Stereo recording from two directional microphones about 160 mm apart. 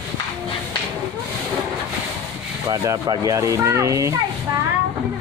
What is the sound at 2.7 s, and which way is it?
Speech, 25° right (ahead or behind).